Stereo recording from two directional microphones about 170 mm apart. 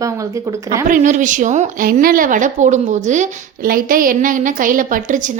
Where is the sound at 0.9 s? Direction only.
50° right (ahead or behind).